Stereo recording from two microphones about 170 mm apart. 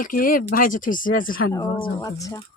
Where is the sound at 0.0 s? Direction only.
55° left (ahead or behind).